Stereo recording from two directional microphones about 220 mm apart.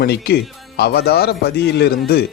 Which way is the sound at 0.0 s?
45° left (ahead or behind).